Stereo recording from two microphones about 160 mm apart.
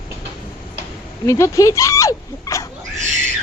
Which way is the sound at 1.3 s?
20° left (ahead or behind).